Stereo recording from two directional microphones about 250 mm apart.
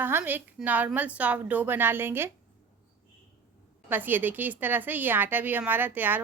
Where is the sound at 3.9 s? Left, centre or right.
Centre.